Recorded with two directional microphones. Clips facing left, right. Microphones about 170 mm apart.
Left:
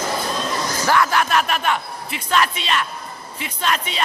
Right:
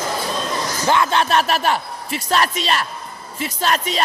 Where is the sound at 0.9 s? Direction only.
25° right (ahead or behind).